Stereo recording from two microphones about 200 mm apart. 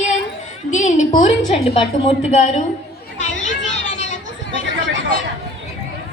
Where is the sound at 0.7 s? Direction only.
35° left (ahead or behind).